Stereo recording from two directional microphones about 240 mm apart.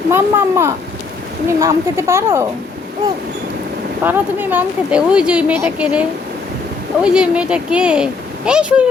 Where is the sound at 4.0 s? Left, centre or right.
Centre.